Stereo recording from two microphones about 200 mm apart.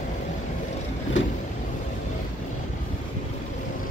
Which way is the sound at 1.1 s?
70° left (ahead or behind).